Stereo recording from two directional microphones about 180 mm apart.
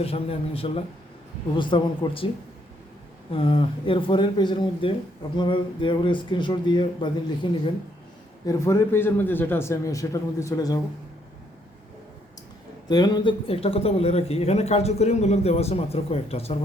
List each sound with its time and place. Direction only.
0.0 s speech: 30° left (ahead or behind)
3.3 s speech: 30° left (ahead or behind)
8.4 s a man's voice: 15° left (ahead or behind)
12.9 s speech: 25° left (ahead or behind)